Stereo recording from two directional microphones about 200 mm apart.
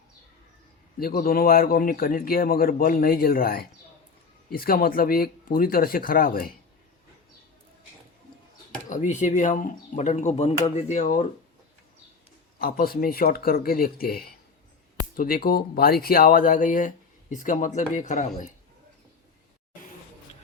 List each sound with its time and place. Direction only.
0.9 s speech: 45° left (ahead or behind)
8.9 s speech: 35° left (ahead or behind)
12.5 s speech: 45° left (ahead or behind)